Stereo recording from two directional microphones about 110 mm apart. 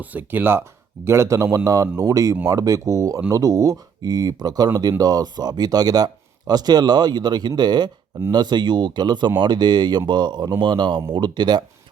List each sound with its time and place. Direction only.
0.0 s a man's voice: 15° right (ahead or behind); by 11.6 s 40° right (ahead or behind)